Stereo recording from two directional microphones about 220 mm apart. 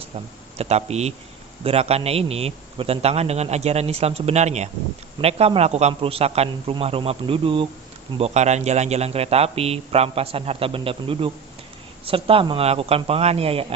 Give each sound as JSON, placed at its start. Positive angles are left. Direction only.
{"t": 0.6, "sound": "a man's voice", "side_deg": -30}